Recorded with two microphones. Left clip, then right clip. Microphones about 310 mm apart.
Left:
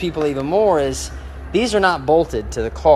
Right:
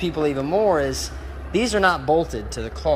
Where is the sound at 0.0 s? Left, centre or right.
Centre.